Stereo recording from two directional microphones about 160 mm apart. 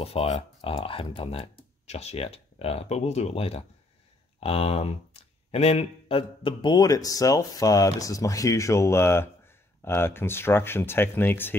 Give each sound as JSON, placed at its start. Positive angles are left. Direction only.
{"t": 0.0, "sound": "a man's voice", "side_deg": 40}